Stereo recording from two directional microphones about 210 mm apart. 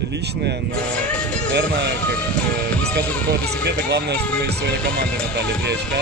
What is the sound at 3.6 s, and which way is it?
Speech, 50° right (ahead or behind).